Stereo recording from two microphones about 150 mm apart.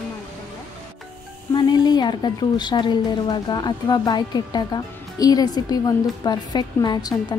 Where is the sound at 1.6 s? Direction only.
30° left (ahead or behind).